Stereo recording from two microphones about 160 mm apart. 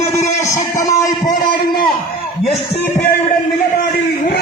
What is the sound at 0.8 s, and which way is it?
Speech, 20° left (ahead or behind).